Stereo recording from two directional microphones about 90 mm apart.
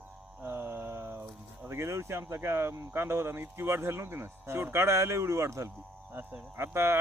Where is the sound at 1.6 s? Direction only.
30° right (ahead or behind).